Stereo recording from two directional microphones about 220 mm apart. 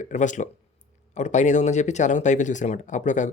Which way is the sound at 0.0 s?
35° left (ahead or behind).